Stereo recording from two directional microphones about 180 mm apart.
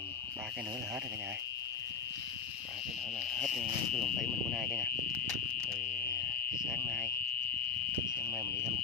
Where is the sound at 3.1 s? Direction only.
5° left (ahead or behind).